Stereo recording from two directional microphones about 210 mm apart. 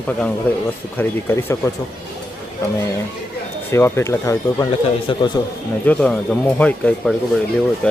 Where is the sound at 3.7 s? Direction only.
10° left (ahead or behind).